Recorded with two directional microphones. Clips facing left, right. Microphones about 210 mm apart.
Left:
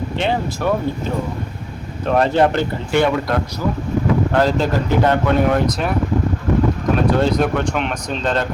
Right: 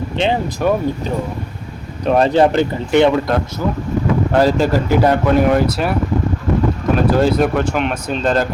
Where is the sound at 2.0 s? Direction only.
20° right (ahead or behind).